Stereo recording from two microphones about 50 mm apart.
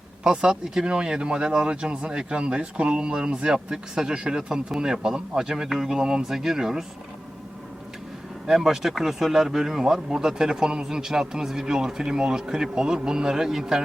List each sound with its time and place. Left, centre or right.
0.3 s speech: centre
8.4 s speech: centre